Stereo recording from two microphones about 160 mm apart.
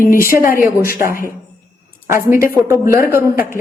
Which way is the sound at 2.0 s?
15° right (ahead or behind).